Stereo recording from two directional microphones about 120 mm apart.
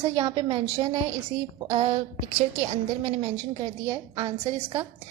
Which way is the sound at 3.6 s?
35° right (ahead or behind).